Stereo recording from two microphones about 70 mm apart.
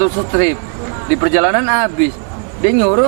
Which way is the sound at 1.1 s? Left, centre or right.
Centre.